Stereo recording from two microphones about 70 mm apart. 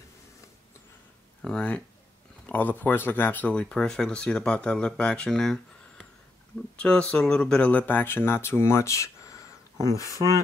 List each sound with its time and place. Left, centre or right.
2.4 s speech: left; by 5.6 s centre
6.8 s speech: centre
7.7 s speech: left
10.1 s speech: right